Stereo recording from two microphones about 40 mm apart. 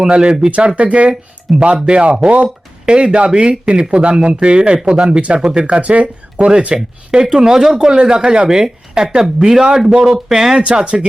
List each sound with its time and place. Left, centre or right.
0.0 s speech: right
0.8 s speech: right; by 5.6 s centre
5.6 s speech: right
8.4 s speech: centre
10.0 s speech: centre